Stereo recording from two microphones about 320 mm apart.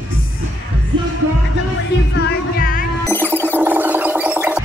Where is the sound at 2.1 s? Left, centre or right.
Left.